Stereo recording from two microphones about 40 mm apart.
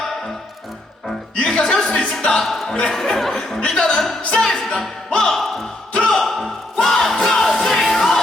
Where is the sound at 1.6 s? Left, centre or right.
Centre.